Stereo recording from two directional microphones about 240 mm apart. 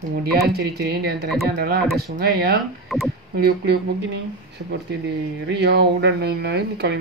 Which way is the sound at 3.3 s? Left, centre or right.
Right.